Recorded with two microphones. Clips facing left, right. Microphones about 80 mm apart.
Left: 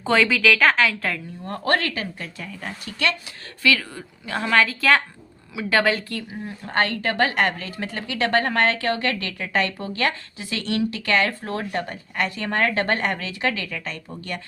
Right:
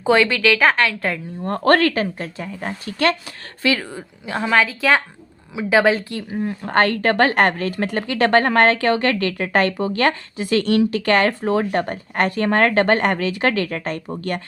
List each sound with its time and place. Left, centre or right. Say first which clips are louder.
0.0 s a woman's voice: right 3 dB; centre
1.5 s a woman's voice: right 7 dB; right
3.9 s speech: right 3 dB; centre
6.4 s speech: right 6 dB; right
12.5 s speech: right 6 dB; right